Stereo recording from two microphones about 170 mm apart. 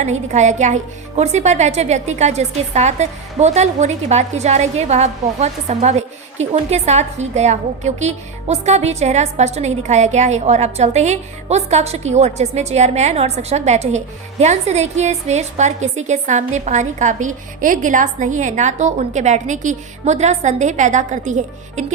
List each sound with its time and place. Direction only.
0.0 s a woman's voice: 45° right (ahead or behind)